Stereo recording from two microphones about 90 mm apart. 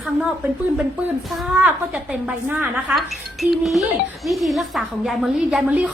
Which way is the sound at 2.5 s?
20° right (ahead or behind).